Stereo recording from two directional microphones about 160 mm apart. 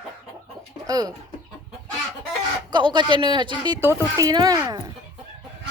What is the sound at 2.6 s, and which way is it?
Speech, 30° right (ahead or behind).